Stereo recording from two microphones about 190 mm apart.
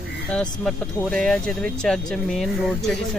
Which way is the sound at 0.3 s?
5° left (ahead or behind).